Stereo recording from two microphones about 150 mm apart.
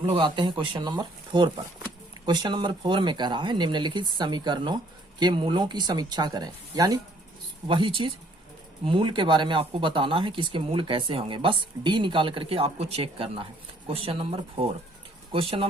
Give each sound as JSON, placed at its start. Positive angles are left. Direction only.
{"t": 0.1, "sound": "speech", "side_deg": -35}
{"t": 7.7, "sound": "speech", "side_deg": -35}